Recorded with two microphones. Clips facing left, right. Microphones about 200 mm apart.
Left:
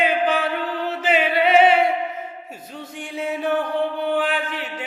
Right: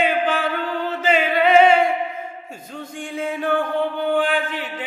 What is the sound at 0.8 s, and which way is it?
Music, 5° left (ahead or behind).